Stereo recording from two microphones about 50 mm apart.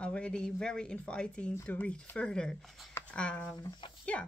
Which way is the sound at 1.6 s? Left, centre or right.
Left.